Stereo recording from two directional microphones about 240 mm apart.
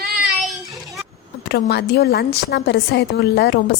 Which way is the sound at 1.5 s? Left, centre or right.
Left.